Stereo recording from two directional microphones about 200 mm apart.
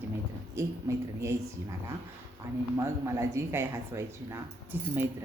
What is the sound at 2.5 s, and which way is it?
Speech, 10° right (ahead or behind).